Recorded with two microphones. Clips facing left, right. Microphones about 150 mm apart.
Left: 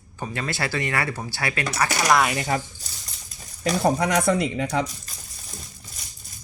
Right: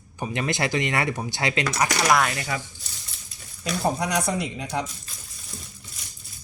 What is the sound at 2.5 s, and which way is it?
Speech, 45° left (ahead or behind).